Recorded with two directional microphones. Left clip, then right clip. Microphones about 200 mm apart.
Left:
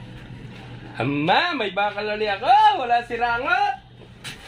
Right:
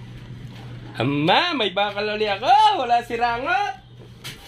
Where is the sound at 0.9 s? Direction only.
40° right (ahead or behind).